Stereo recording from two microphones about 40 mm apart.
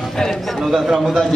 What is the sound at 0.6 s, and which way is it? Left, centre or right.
Speech, centre.